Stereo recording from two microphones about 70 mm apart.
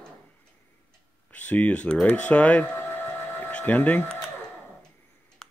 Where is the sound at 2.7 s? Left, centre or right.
Left.